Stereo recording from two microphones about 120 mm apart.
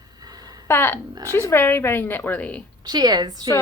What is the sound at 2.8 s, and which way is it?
Speech, 35° right (ahead or behind).